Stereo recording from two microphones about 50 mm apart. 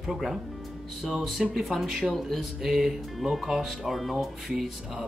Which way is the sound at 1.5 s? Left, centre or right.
Centre.